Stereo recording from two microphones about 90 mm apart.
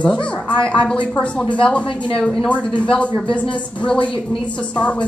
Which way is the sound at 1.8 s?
65° left (ahead or behind).